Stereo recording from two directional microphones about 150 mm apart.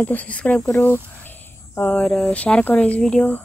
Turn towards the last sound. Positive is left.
turn(degrees=10)  # may be behind; listen again after turning